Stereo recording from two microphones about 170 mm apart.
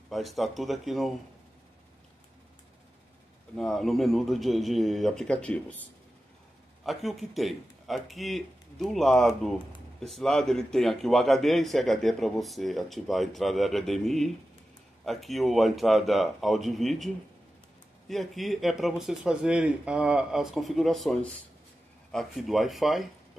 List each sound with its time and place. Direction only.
0.1 s a man's voice: centre (ahead or behind)
3.5 s a man's voice: 5° left (ahead or behind)
6.8 s a man's voice: centre (ahead or behind)